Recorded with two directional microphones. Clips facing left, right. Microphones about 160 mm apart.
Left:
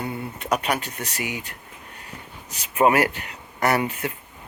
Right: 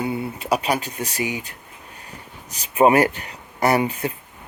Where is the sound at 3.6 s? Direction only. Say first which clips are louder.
Right 3 dB; 15° right (ahead or behind).